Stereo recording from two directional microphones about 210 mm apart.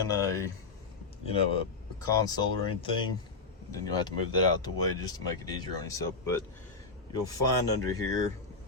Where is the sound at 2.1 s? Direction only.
20° left (ahead or behind).